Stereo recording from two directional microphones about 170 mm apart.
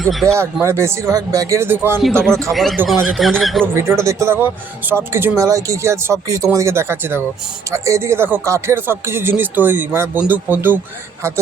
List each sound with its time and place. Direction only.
0.0 s speech: centre (ahead or behind)
0.3 s speech: 15° right (ahead or behind)
2.5 s speech: centre (ahead or behind)
3.8 s speech: 15° right (ahead or behind)